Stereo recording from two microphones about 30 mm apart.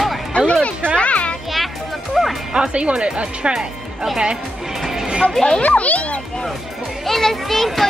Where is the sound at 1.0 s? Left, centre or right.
Left.